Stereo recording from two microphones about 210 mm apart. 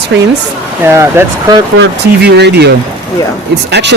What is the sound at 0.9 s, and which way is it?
Speech, 10° right (ahead or behind).